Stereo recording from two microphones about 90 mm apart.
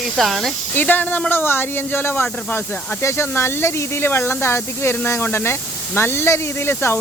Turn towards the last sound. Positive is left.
turn(degrees=25)  # may be behind; listen again after turning